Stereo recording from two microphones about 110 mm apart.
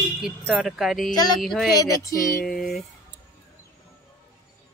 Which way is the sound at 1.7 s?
30° left (ahead or behind).